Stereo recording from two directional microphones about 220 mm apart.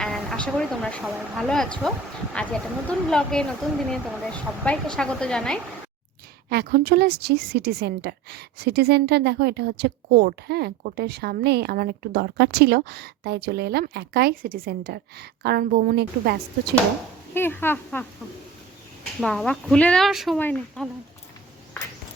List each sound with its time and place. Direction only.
0.0 s speech: centre (ahead or behind)
6.5 s a woman's voice: 45° right (ahead or behind)
17.3 s speech: 10° left (ahead or behind)
19.2 s speech: 5° left (ahead or behind)